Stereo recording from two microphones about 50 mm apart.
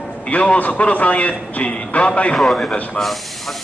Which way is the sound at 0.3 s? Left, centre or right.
Left.